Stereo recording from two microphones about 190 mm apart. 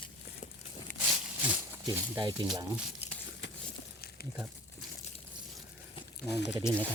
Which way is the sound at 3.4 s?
70° left (ahead or behind).